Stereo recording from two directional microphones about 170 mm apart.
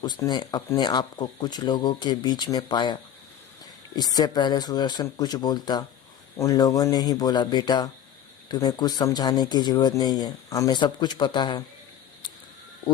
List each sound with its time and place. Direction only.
0.0 s speech: 25° left (ahead or behind)